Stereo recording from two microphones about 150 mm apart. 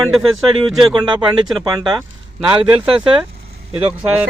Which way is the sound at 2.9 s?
35° right (ahead or behind).